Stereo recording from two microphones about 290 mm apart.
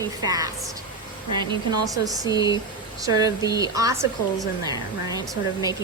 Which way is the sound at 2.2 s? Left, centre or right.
Centre.